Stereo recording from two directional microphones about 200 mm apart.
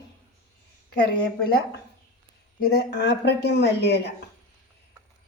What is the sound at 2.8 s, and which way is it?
Speech, 55° left (ahead or behind).